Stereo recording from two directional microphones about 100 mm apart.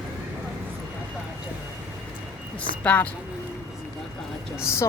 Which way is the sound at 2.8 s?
15° left (ahead or behind).